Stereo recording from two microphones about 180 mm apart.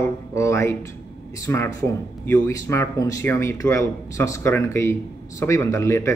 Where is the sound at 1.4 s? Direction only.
15° left (ahead or behind).